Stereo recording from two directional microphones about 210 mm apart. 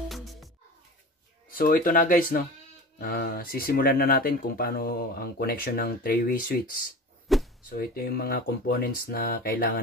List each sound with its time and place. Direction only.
0.1 s music: centre (ahead or behind)
1.5 s speech: 40° left (ahead or behind)
7.3 s a sound: centre (ahead or behind)
7.7 s speech: 45° left (ahead or behind)